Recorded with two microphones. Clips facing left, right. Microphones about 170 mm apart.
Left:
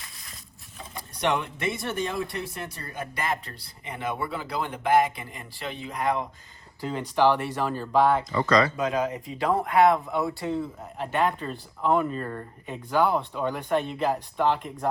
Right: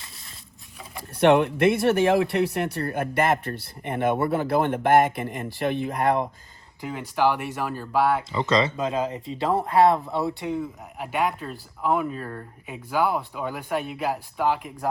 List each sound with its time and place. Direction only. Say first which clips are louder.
1.2 s speech: right 9 dB; 60° right (ahead or behind)
7.2 s speech: left 1 dB; 10° right (ahead or behind)
8.4 s speech: even; 25° right (ahead or behind)
10.4 s speech: even; 15° right (ahead or behind)